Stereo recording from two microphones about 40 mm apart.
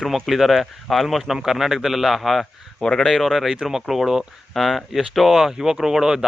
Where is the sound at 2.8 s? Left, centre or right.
Centre.